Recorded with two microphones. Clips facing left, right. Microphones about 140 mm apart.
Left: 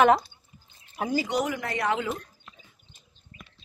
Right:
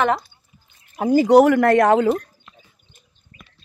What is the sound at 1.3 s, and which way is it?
Speech, 65° right (ahead or behind).